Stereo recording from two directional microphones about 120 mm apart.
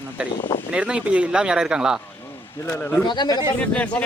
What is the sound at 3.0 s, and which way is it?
Speech, 35° left (ahead or behind).